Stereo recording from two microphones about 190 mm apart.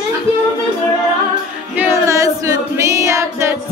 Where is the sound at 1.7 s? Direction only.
10° right (ahead or behind).